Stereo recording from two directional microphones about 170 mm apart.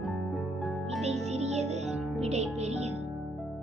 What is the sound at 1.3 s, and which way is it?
Music, 40° right (ahead or behind).